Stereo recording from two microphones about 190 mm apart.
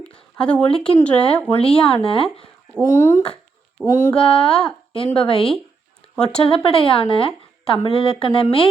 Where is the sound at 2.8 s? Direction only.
15° left (ahead or behind).